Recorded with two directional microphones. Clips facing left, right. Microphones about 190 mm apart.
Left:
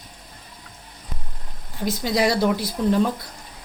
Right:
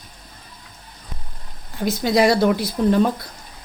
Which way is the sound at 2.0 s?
55° right (ahead or behind).